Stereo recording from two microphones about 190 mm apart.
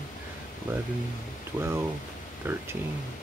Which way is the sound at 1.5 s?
10° right (ahead or behind).